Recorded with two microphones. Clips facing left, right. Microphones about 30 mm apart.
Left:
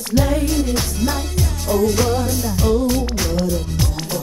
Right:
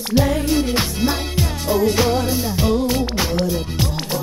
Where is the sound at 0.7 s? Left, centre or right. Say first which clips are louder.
Right 1 dB; right.